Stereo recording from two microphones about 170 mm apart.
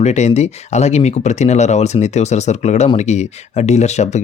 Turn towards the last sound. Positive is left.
turn(degrees=40)  # may be behind; listen again after turning